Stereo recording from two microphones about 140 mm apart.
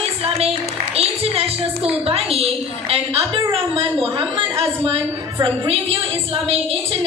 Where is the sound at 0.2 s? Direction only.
45° right (ahead or behind).